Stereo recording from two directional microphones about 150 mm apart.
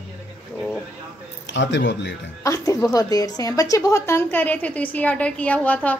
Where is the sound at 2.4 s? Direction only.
20° left (ahead or behind).